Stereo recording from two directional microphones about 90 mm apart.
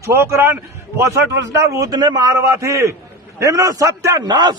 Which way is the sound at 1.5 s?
45° right (ahead or behind).